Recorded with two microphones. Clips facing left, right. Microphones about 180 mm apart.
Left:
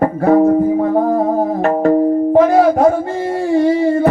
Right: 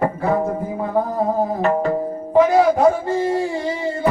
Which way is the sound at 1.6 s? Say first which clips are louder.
Left 9 dB; 45° left (ahead or behind).